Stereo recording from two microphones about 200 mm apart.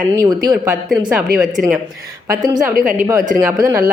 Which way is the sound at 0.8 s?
5° right (ahead or behind).